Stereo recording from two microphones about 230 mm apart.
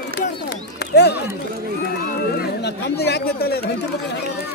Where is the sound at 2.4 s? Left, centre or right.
Left.